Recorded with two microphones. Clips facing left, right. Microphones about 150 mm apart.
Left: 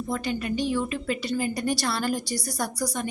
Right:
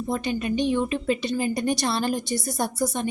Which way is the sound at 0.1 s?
20° right (ahead or behind).